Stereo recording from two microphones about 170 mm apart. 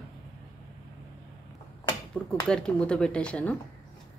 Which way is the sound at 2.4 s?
5° left (ahead or behind).